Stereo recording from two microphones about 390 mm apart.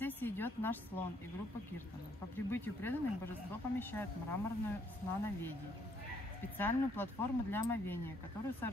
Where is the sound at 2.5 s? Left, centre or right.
Centre.